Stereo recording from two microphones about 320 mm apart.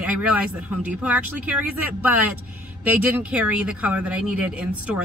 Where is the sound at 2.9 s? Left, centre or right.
Centre.